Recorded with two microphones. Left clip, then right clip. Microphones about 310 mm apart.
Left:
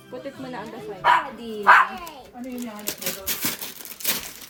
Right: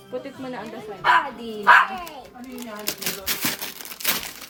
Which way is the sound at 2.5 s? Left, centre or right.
Centre.